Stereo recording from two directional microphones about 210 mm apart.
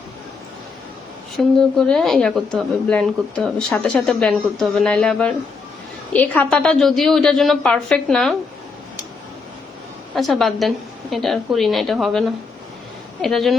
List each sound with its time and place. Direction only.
1.5 s speech: 5° left (ahead or behind)
10.2 s speech: centre (ahead or behind)